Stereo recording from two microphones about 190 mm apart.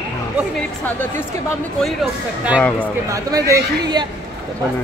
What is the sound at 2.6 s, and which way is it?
Speech, 5° left (ahead or behind).